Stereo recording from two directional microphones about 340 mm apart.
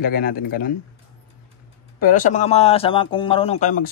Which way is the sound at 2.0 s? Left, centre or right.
Left.